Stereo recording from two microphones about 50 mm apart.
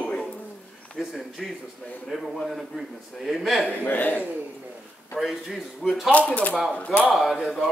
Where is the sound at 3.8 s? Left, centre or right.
Left.